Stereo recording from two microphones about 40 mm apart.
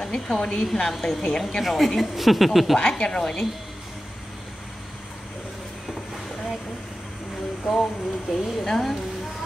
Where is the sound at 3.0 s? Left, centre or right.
Centre.